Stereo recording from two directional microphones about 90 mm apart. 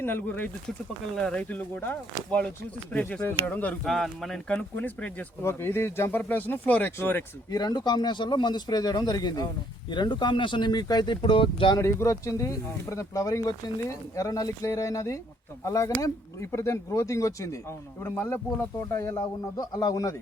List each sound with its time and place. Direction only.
0.0 s speech: 20° left (ahead or behind)
1.1 s speech: 10° left (ahead or behind)
3.8 s speech: 5° left (ahead or behind)
4.5 s speech: 15° left (ahead or behind)
5.4 s speech: 30° left (ahead or behind)
7.5 s speech: 50° left (ahead or behind); by 11.7 s 75° left (ahead or behind)
11.8 s speech: 30° left (ahead or behind)